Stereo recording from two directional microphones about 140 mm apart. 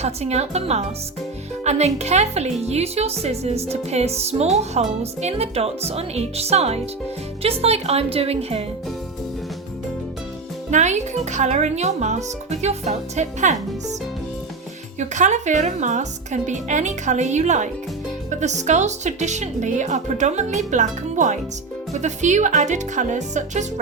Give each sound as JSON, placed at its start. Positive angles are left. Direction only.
{"t": 0.0, "sound": "speech", "side_deg": -50}
{"t": 10.7, "sound": "speech", "side_deg": -55}
{"t": 14.9, "sound": "speech", "side_deg": -60}